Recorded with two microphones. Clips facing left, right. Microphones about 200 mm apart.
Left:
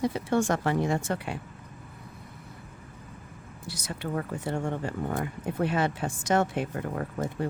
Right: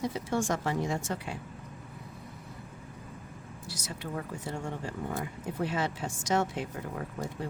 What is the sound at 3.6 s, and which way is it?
Speech, 60° left (ahead or behind).